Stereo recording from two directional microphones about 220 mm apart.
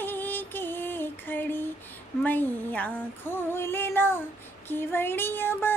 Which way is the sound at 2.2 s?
10° left (ahead or behind).